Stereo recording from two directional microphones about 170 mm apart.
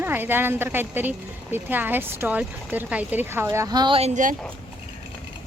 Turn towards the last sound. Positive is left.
turn(degrees=-30)  # may be behind; listen again after turning